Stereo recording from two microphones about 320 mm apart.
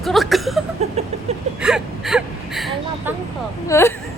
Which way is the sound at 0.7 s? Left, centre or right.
Centre.